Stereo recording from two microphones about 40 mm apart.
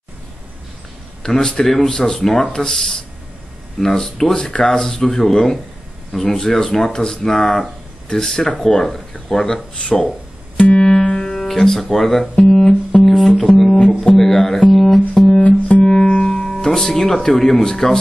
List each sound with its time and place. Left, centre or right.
1.2 s speech: centre
9.8 s speech: left
10.8 s music: centre
11.3 s speech: centre
12.4 s guitar: centre
14.1 s speech: centre
15.4 s music: left
16.1 s music: left
16.5 s speech: centre